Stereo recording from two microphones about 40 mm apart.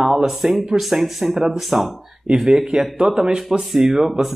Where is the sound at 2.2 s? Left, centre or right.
Centre.